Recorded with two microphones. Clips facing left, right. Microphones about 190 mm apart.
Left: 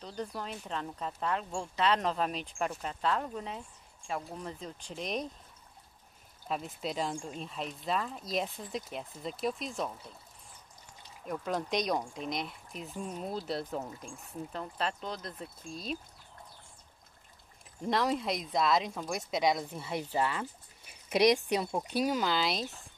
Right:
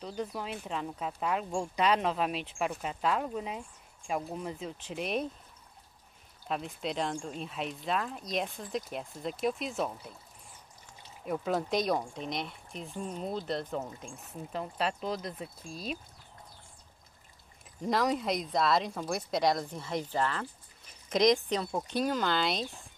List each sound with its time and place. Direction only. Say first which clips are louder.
0.0 s speech: right 2 dB; 5° right (ahead or behind)
6.4 s speech: right 1 dB; centre (ahead or behind)
11.4 s speech: right 2 dB; centre (ahead or behind)
17.8 s speech: right 1 dB; centre (ahead or behind)